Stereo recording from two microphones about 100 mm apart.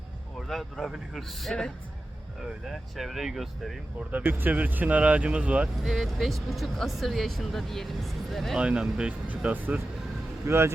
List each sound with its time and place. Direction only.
0.3 s speech: 5° left (ahead or behind)
4.1 s speech: 20° right (ahead or behind)
5.8 s speech: centre (ahead or behind)
8.6 s speech: 10° right (ahead or behind)
10.4 s speech: 25° right (ahead or behind)